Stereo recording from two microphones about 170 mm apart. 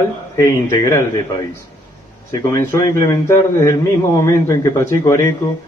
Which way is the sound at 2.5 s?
15° left (ahead or behind).